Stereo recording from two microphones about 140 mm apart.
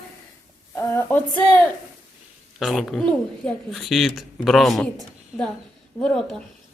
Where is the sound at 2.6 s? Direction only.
5° left (ahead or behind).